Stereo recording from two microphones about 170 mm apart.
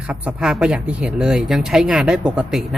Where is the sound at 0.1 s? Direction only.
5° right (ahead or behind).